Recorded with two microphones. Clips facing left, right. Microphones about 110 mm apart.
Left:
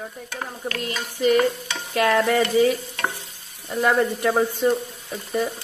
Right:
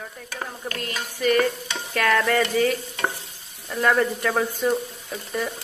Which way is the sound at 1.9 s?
25° left (ahead or behind).